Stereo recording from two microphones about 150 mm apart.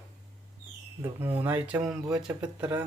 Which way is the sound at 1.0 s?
15° right (ahead or behind).